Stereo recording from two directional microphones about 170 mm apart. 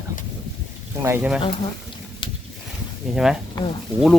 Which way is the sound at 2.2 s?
30° left (ahead or behind).